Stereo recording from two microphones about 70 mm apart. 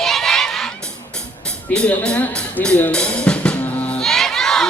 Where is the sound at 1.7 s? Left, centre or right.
Centre.